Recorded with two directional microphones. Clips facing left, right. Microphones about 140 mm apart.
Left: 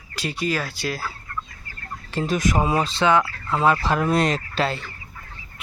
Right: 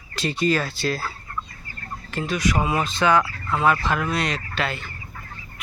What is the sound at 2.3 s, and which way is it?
Speech, 45° left (ahead or behind).